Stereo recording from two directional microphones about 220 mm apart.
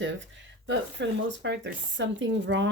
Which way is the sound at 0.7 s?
55° right (ahead or behind).